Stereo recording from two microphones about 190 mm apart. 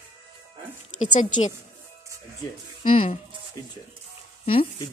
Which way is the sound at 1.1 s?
40° left (ahead or behind).